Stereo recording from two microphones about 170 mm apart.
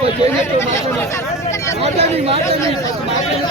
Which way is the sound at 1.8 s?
35° right (ahead or behind).